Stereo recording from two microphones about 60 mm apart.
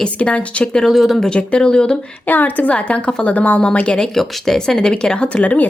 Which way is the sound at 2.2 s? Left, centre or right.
Left.